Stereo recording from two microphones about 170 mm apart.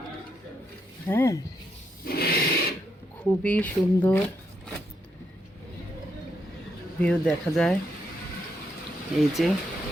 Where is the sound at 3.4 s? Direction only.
10° left (ahead or behind).